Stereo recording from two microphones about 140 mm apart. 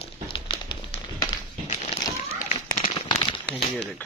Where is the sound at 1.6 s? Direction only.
55° left (ahead or behind).